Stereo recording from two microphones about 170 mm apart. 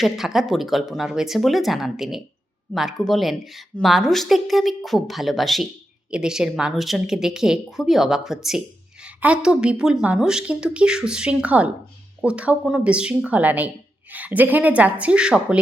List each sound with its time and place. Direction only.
0.0 s speech: centre (ahead or behind)